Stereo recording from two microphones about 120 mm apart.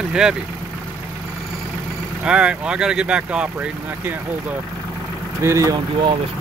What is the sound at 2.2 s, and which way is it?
Speech, 5° right (ahead or behind).